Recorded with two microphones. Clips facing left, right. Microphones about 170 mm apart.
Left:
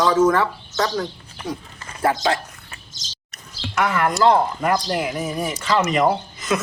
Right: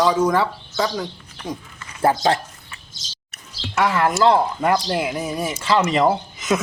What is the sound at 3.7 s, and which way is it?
Speech, 30° right (ahead or behind).